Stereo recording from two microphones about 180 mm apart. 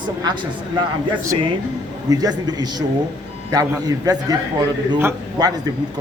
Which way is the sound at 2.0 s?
20° right (ahead or behind).